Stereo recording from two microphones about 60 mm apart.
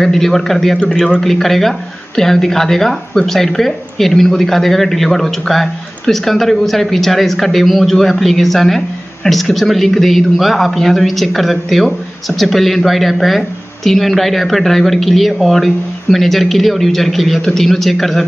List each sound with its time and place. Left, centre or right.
0.0 s speech: centre